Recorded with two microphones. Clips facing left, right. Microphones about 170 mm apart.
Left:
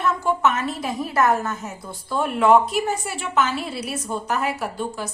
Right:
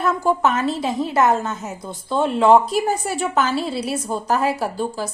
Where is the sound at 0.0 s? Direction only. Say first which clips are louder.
Right 2 dB; 35° right (ahead or behind).